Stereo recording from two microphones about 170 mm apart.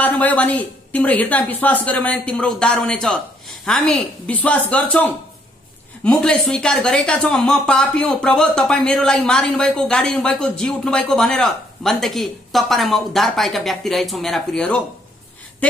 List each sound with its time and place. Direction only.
0.0 s a woman's voice: 10° left (ahead or behind)